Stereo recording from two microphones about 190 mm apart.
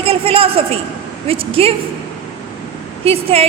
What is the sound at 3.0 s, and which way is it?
Speech, 30° right (ahead or behind).